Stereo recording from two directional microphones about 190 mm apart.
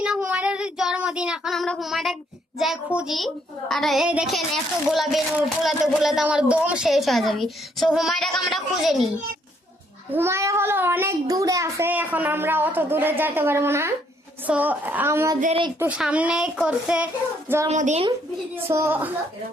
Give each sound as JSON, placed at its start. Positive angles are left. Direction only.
{"t": 0.0, "sound": "child singing", "side_deg": -5}
{"t": 2.6, "sound": "a woman's voice", "side_deg": -5}
{"t": 10.1, "sound": "a child's voice", "side_deg": -15}
{"t": 17.7, "sound": "speech", "side_deg": -40}
{"t": 18.5, "sound": "a child's voice", "side_deg": -15}